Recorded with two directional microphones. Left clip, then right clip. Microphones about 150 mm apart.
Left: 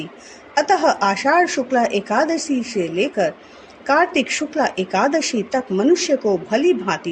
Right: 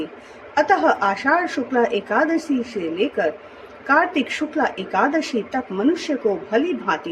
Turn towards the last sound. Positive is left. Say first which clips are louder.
# left 4 dB
turn(degrees=65)  # may be behind; listen again after turning